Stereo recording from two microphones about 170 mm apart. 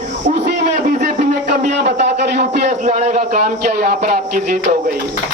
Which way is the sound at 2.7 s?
40° right (ahead or behind).